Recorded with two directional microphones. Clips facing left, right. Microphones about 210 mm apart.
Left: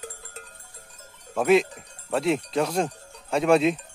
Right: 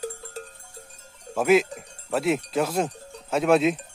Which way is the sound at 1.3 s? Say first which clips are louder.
Even; 5° right (ahead or behind).